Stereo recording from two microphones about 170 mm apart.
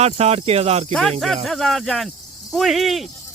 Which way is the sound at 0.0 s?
40° right (ahead or behind).